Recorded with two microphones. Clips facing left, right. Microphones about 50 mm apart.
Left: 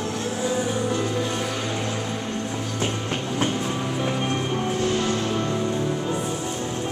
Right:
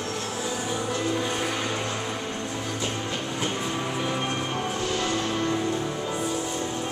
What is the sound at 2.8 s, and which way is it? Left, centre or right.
Music, left.